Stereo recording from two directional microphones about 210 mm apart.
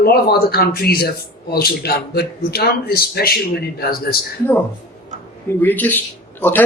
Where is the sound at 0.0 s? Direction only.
45° left (ahead or behind).